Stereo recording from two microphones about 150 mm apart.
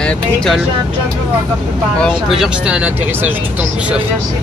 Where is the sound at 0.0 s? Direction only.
5° left (ahead or behind).